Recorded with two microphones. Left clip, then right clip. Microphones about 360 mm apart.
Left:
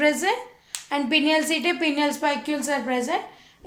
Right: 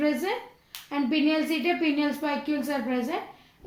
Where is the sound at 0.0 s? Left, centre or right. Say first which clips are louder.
Left 6 dB; left.